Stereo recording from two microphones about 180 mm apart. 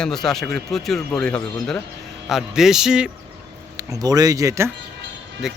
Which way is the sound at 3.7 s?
20° right (ahead or behind).